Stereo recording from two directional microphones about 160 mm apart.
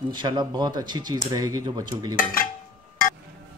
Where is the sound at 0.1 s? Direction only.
30° right (ahead or behind).